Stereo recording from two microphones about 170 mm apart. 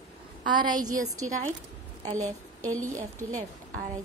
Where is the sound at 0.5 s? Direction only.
25° right (ahead or behind).